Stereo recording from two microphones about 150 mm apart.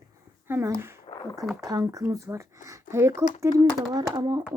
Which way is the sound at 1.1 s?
40° left (ahead or behind).